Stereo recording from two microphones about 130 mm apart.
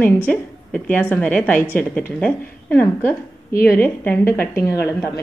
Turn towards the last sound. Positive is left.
turn(degrees=20)  # may be behind; listen again after turning